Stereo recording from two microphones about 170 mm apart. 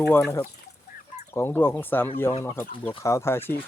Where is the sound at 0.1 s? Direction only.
15° left (ahead or behind).